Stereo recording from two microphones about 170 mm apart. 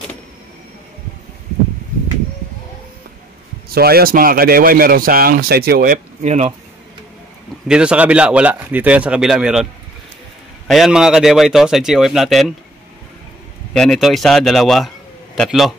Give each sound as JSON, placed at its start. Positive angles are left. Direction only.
{"t": 3.6, "sound": "a man's voice", "side_deg": -65}
{"t": 6.2, "sound": "speech", "side_deg": -40}
{"t": 7.6, "sound": "a man's voice", "side_deg": -5}
{"t": 10.7, "sound": "a man's voice", "side_deg": 0}
{"t": 13.7, "sound": "a man's voice", "side_deg": 0}